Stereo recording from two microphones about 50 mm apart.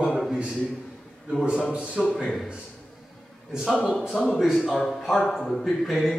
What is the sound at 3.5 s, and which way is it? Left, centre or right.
Speech, centre.